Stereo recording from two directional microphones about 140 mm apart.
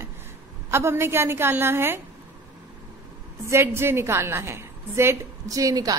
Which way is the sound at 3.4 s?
20° right (ahead or behind).